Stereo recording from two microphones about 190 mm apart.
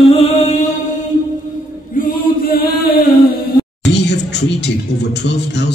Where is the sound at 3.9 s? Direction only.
60° left (ahead or behind).